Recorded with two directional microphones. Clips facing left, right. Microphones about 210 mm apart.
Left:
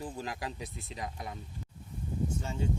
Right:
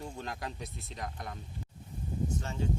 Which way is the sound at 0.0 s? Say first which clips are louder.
Left 2 dB; centre (ahead or behind).